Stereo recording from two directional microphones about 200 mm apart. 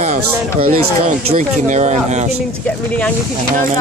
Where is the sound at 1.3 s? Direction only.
35° right (ahead or behind).